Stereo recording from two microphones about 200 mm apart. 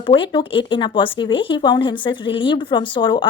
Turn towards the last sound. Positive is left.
turn(degrees=25)  # may be behind; listen again after turning